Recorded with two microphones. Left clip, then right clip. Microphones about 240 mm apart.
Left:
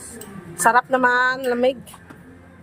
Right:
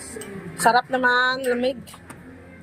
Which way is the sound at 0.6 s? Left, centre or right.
Centre.